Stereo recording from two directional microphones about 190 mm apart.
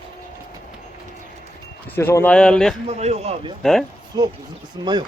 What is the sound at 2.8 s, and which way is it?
A man's voice, 35° right (ahead or behind).